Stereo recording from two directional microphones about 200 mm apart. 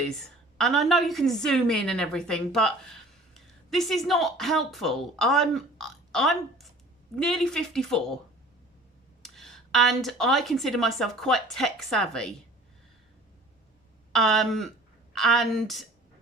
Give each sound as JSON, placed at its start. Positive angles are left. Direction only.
{"t": 0.6, "sound": "speech", "side_deg": 0}
{"t": 9.2, "sound": "speech", "side_deg": 0}
{"t": 14.1, "sound": "speech", "side_deg": 0}